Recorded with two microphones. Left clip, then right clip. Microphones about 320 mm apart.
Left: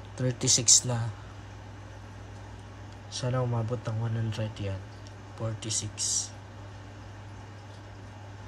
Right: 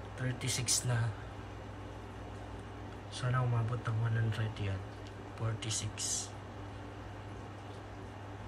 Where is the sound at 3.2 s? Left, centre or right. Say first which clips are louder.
Left 7 dB; centre.